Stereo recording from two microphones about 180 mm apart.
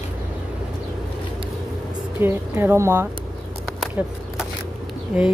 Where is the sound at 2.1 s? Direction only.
10° right (ahead or behind).